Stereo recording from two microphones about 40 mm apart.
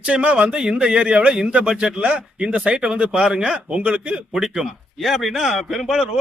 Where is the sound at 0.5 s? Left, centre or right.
Right.